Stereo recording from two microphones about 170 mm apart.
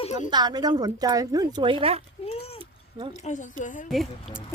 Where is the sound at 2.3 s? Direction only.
35° left (ahead or behind).